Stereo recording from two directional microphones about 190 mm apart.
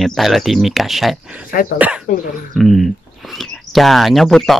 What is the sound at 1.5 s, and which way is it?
Speech, 50° left (ahead or behind).